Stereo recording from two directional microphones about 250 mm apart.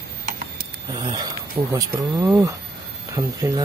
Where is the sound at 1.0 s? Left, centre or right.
Centre.